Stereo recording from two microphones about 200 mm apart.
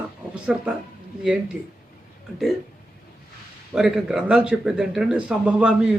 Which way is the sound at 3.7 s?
5° right (ahead or behind).